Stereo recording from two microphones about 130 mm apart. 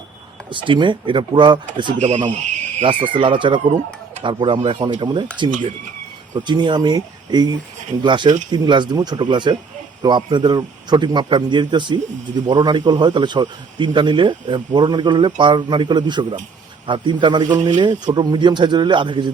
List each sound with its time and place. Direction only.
0.5 s a man's voice: 40° right (ahead or behind)
2.0 s speech: 60° right (ahead or behind)
2.8 s a man's voice: 40° right (ahead or behind)